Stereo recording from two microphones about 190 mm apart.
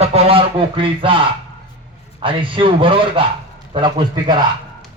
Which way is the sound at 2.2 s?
25° right (ahead or behind).